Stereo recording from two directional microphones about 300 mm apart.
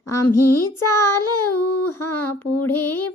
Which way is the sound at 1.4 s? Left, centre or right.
Left.